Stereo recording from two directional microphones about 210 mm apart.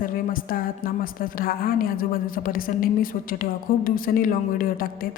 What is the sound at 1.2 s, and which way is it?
A woman's voice, 45° left (ahead or behind).